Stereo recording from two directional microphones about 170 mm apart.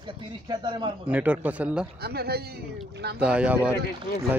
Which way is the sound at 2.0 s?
70° right (ahead or behind).